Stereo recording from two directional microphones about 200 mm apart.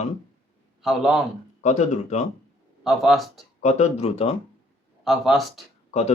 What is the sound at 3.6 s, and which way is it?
Speech, 35° left (ahead or behind).